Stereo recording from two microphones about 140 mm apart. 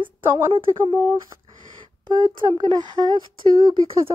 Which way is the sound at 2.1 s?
30° right (ahead or behind).